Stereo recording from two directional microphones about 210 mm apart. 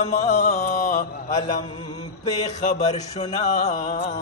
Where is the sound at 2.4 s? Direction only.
30° left (ahead or behind).